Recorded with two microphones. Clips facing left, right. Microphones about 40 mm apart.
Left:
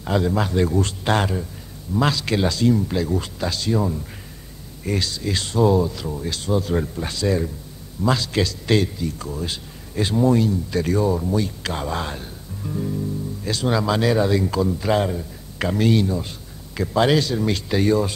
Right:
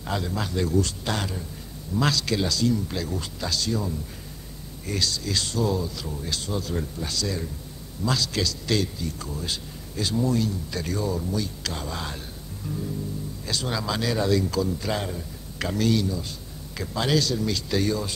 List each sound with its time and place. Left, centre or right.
0.1 s a man's voice: left
2.0 s a man's voice: left
12.6 s speech: left
13.5 s a man's voice: left
14.1 s a man's voice: left